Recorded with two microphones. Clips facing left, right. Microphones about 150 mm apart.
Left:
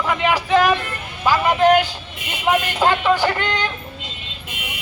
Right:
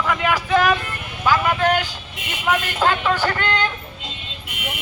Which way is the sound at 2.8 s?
15° left (ahead or behind).